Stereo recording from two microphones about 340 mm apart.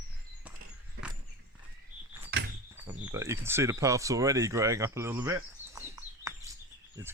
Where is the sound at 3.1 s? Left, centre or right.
Centre.